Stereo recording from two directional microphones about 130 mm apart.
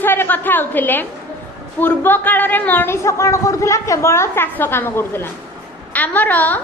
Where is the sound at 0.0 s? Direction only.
15° left (ahead or behind).